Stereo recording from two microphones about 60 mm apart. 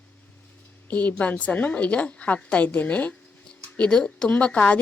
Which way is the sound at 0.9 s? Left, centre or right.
Left.